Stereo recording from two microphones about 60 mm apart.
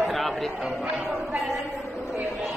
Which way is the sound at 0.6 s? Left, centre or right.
Centre.